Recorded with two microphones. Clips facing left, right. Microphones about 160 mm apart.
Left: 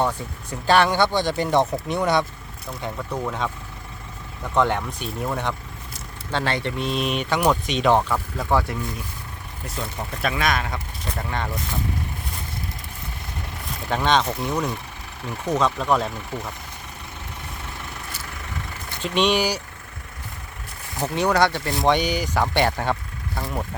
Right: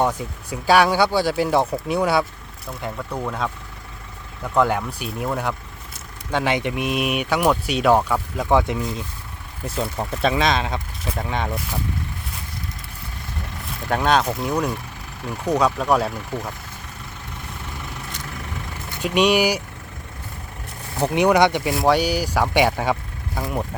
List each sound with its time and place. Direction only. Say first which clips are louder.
0.0 s speech: right 2 dB; 10° right (ahead or behind)
13.9 s speech: right 2 dB; 5° right (ahead or behind)
19.0 s speech: right 3 dB; 10° right (ahead or behind)
21.0 s speech: right 4 dB; 15° right (ahead or behind)